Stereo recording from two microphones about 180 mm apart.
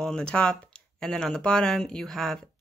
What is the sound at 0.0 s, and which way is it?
Speech, 5° left (ahead or behind).